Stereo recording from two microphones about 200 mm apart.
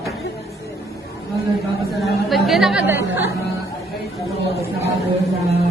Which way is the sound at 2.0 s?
Centre (ahead or behind).